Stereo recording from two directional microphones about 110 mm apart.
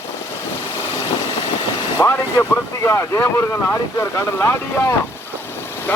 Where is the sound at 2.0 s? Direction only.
25° left (ahead or behind).